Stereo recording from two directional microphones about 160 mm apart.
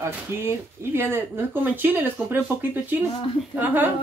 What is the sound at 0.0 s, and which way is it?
Speech, 15° right (ahead or behind).